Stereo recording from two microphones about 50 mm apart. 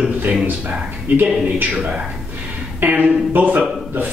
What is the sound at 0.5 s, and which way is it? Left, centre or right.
A man's voice, right.